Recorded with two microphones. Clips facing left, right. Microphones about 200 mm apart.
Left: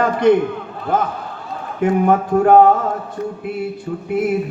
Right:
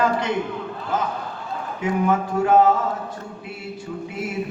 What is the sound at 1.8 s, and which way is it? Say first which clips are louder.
Speech: left 6 dB; 55° left (ahead or behind).